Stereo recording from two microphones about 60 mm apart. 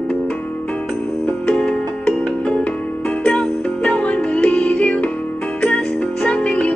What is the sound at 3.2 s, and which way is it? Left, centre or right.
Music, centre.